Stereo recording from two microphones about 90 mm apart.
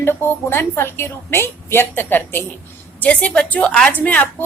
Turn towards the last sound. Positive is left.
turn(degrees=15)  # may be behind; listen again after turning